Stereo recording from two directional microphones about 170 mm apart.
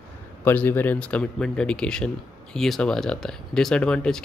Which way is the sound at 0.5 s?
10° left (ahead or behind).